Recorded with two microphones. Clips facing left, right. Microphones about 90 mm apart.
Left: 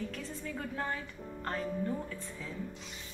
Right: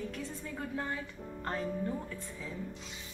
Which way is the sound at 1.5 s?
15° right (ahead or behind).